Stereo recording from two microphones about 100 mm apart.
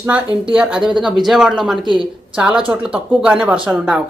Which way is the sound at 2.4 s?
10° right (ahead or behind).